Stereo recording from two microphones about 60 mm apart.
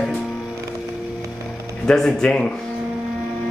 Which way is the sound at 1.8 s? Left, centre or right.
Centre.